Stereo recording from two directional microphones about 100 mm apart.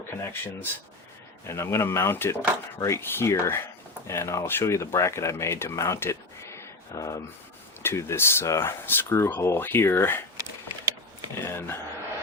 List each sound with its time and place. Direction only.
0.1 s speech: 25° left (ahead or behind)
11.3 s speech: 25° left (ahead or behind)